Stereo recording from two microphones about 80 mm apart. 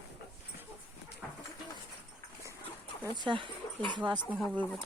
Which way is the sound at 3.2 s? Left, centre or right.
Right.